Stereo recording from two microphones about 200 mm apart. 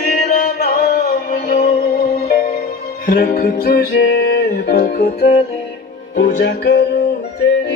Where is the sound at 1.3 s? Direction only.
45° left (ahead or behind).